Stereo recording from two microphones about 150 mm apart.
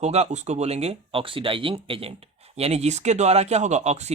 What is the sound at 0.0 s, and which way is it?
Speech, 45° right (ahead or behind).